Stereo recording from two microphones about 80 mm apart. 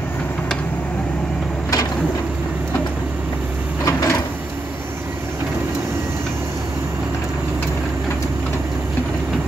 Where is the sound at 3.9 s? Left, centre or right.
Left.